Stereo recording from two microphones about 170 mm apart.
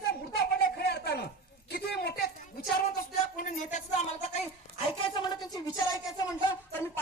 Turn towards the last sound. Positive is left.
turn(degrees=15)  # may be behind; listen again after turning